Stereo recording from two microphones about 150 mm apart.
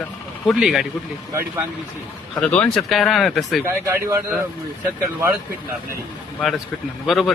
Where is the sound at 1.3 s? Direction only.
20° right (ahead or behind).